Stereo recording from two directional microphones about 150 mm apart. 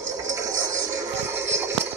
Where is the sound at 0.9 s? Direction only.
15° right (ahead or behind).